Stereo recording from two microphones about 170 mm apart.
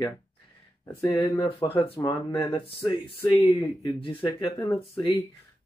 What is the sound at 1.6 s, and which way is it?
Speech, 25° left (ahead or behind).